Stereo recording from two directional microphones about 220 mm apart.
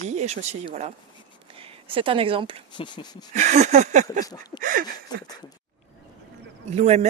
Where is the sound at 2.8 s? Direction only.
25° left (ahead or behind).